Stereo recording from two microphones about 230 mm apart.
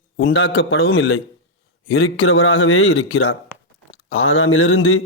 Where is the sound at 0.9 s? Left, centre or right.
Left.